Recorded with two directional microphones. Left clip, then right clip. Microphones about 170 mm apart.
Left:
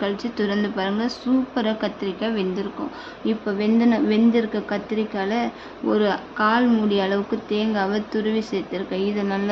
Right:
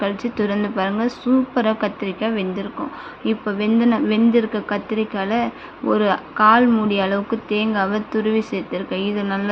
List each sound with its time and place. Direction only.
0.0 s speech: 15° right (ahead or behind)